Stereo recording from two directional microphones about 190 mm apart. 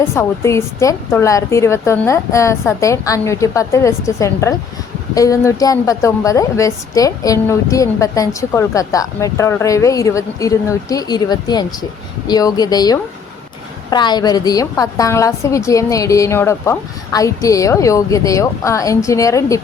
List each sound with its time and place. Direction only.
0.0 s a woman's voice: 15° left (ahead or behind)